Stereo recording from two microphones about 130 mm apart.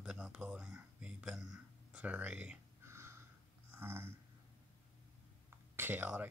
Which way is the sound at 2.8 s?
20° right (ahead or behind).